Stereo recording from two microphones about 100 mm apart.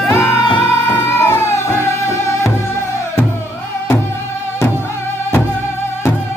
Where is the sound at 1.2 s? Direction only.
30° left (ahead or behind).